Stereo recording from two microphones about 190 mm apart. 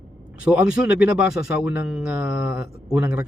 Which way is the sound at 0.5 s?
5° right (ahead or behind).